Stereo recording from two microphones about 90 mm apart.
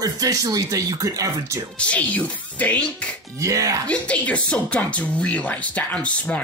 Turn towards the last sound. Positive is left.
turn(degrees=15)  # may be behind; listen again after turning